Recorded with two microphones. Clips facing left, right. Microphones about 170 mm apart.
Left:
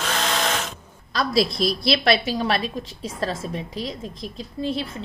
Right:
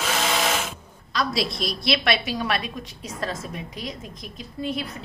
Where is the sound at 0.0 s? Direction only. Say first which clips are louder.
Even; 5° right (ahead or behind).